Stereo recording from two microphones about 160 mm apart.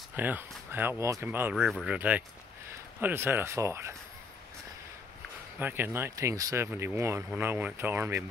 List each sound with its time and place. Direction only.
0.1 s speech: 10° right (ahead or behind)
1.7 s speech: centre (ahead or behind)
2.0 s speech: 10° right (ahead or behind)
5.6 s speech: 10° right (ahead or behind)